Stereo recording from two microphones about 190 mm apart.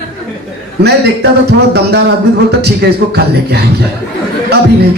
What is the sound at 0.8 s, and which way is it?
A man's voice, 60° right (ahead or behind).